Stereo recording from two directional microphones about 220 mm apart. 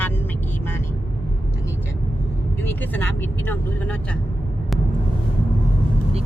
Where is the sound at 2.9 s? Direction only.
10° left (ahead or behind).